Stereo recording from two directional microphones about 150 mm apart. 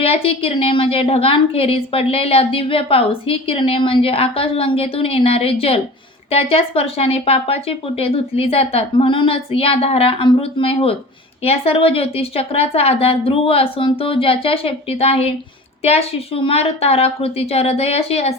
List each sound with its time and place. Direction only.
0.0 s a woman's voice: 40° left (ahead or behind)